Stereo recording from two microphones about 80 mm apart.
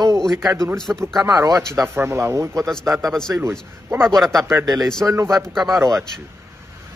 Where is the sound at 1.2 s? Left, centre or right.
Right.